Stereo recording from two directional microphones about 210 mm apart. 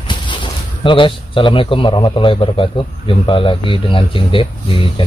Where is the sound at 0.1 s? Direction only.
25° left (ahead or behind).